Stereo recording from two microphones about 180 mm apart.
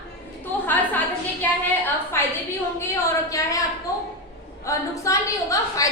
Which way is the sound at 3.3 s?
20° left (ahead or behind).